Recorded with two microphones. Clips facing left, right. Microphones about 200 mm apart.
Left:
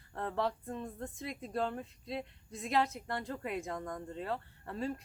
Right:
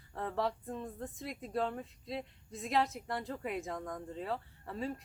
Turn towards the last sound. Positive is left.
turn(degrees=0)  # may be behind; listen again after turning